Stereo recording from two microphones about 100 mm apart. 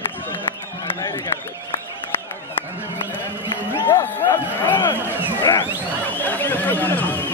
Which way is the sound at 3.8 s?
45° left (ahead or behind).